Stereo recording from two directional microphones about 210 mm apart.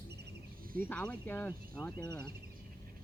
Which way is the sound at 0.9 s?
5° left (ahead or behind).